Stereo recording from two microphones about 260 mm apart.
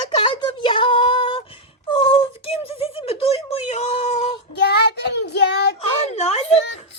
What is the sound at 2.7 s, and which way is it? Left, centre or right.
Speech, left.